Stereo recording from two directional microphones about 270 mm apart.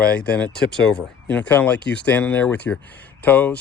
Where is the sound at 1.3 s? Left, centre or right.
Centre.